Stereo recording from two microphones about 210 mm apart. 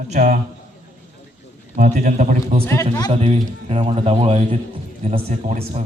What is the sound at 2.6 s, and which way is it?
Speech, 15° left (ahead or behind).